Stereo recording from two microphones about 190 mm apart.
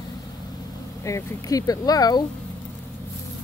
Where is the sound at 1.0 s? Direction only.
15° left (ahead or behind).